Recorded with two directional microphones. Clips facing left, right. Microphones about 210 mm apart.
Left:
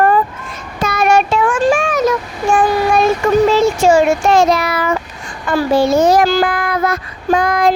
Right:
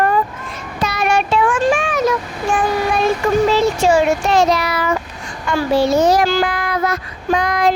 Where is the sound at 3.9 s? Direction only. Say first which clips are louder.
Left 3 dB; 50° left (ahead or behind).